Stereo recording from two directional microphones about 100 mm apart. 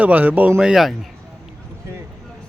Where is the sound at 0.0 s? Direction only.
15° right (ahead or behind).